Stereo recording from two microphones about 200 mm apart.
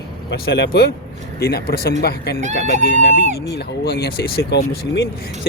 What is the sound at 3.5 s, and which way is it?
Speech, 55° left (ahead or behind).